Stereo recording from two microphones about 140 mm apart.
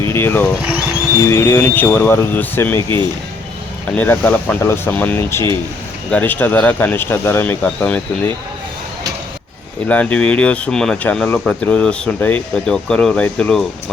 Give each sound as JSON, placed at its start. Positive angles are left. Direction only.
{"t": 0.1, "sound": "speech", "side_deg": 15}
{"t": 3.9, "sound": "speech", "side_deg": 15}
{"t": 9.8, "sound": "speech", "side_deg": 10}